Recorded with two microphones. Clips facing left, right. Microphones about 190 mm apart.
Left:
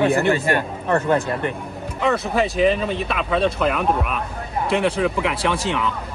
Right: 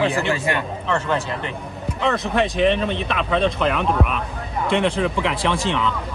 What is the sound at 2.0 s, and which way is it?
Speech, centre (ahead or behind).